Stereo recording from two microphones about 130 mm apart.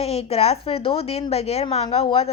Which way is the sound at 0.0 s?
50° left (ahead or behind).